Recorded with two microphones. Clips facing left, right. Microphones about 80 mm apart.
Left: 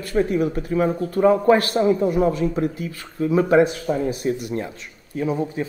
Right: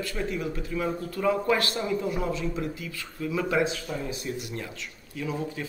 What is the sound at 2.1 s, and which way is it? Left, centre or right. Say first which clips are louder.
Speech: left 10 dB; left.